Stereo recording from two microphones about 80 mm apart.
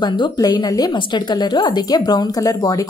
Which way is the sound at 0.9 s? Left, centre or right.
Left.